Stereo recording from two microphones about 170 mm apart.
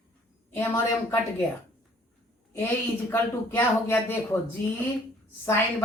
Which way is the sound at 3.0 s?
15° left (ahead or behind).